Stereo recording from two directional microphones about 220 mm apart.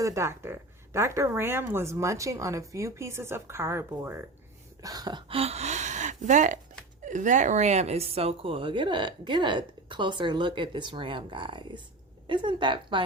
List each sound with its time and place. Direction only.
0.0 s a woman's voice: 15° right (ahead or behind)